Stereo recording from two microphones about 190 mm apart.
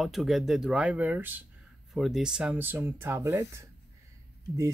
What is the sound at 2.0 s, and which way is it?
Speech, centre (ahead or behind).